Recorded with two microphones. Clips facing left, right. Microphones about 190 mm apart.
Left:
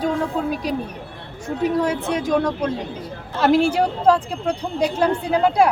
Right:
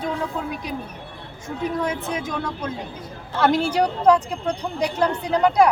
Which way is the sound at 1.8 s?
35° left (ahead or behind).